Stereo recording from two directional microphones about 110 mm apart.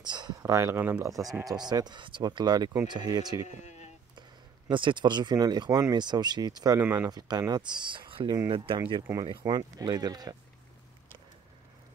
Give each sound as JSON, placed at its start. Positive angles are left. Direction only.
{"t": 0.0, "sound": "a sound", "side_deg": -40}
{"t": 0.4, "sound": "speech", "side_deg": -25}
{"t": 1.4, "sound": "speech", "side_deg": -35}
{"t": 3.4, "sound": "speech", "side_deg": 90}
{"t": 4.6, "sound": "speech", "side_deg": -45}
{"t": 6.8, "sound": "speech", "side_deg": -20}
{"t": 7.1, "sound": "speech", "side_deg": -40}